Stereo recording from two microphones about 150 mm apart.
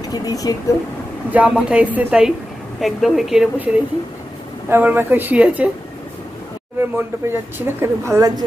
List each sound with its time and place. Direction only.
0.0 s speech: 25° left (ahead or behind)
1.3 s a woman's voice: 10° right (ahead or behind)
6.8 s speech: 15° right (ahead or behind)